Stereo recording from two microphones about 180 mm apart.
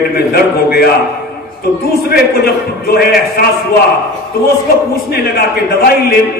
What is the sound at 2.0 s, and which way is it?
A man's voice, 60° left (ahead or behind).